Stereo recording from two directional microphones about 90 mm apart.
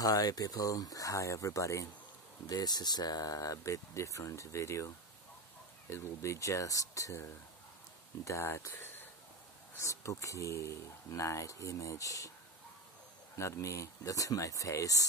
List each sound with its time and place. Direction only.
0.0 s speech: 45° left (ahead or behind)
2.5 s speech: 50° left (ahead or behind)
8.3 s speech: 30° left (ahead or behind)
13.4 s speech: 35° left (ahead or behind)